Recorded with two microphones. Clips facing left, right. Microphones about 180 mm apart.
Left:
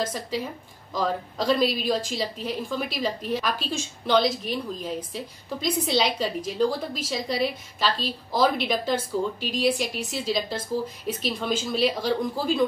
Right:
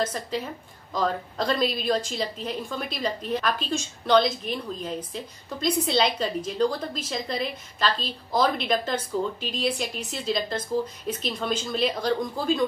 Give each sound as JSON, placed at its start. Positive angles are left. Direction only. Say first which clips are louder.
{"t": 0.0, "sound": "a woman's voice", "louder": "even", "side_deg": 10}